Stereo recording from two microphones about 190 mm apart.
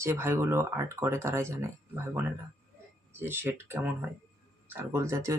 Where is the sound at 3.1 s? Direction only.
10° right (ahead or behind).